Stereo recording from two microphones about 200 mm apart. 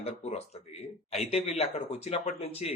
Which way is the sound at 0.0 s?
35° left (ahead or behind).